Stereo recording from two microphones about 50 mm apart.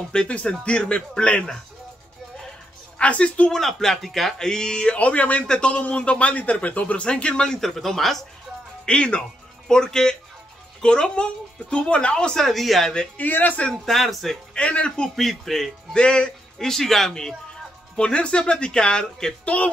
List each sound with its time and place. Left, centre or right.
0.1 s a man's voice: left
3.0 s a man's voice: left
3.5 s speech: centre
4.5 s a man's voice: centre
7.6 s speech: centre
8.8 s a man's voice: left
12.4 s speech: centre
13.2 s a man's voice: left
13.7 s speech: centre
14.5 s a man's voice: left
15.1 s speech: centre
15.9 s a man's voice: centre
16.5 s speech: centre
19.4 s a man's voice: left